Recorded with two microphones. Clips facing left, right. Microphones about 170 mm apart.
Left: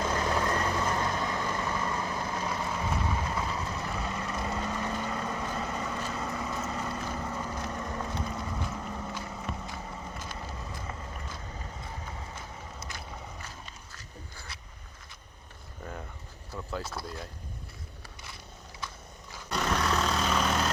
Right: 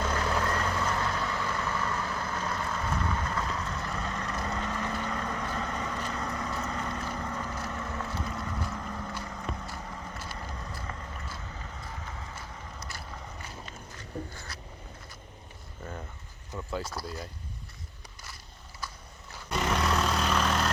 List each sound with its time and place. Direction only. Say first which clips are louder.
0.0 s vehicle: left 1 dB; 10° left (ahead or behind)
8.3 s boat: even; 15° left (ahead or behind)
8.7 s vehicle: even; 10° left (ahead or behind)
15.8 s a sound: even; centre (ahead or behind)
16.9 s speech: right 1 dB; centre (ahead or behind)
19.5 s vehicle: right 1 dB; centre (ahead or behind)